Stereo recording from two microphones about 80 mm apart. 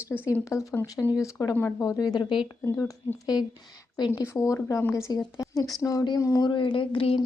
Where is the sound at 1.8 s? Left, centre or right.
Left.